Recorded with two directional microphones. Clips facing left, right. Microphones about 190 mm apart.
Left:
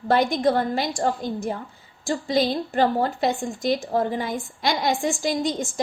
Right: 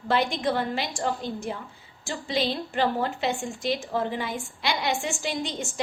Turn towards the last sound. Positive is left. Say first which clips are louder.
# left 6 dB
turn(degrees=35)  # may be behind; listen again after turning